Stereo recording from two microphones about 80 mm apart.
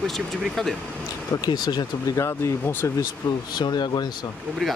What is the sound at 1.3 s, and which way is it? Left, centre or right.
Speech, left.